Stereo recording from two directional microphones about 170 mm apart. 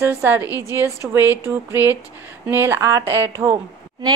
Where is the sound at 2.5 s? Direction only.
15° right (ahead or behind).